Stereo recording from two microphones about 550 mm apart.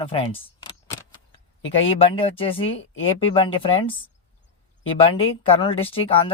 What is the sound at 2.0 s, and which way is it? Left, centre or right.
Speech, centre.